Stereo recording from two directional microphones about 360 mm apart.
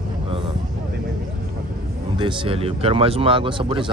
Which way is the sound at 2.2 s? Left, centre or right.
Centre.